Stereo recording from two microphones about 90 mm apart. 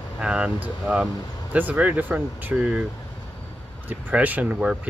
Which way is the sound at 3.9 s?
20° right (ahead or behind).